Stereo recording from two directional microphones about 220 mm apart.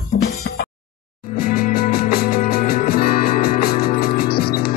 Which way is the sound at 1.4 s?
40° left (ahead or behind).